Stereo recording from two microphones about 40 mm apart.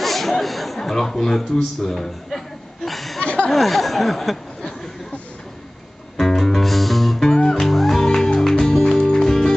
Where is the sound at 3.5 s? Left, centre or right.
Centre.